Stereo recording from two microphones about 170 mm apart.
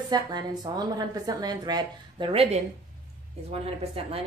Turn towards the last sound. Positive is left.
turn(degrees=-35)  # may be behind; listen again after turning